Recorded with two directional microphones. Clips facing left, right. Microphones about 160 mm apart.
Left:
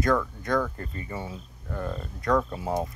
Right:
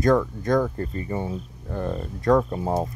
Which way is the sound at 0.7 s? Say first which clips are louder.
Right 7 dB; 30° right (ahead or behind).